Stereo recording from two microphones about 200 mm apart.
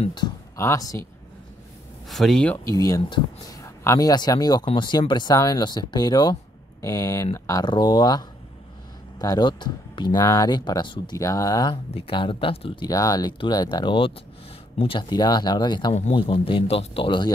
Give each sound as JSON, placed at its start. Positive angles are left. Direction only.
{"t": 0.0, "sound": "speech", "side_deg": 20}
{"t": 2.0, "sound": "speech", "side_deg": 0}
{"t": 2.7, "sound": "speech", "side_deg": 20}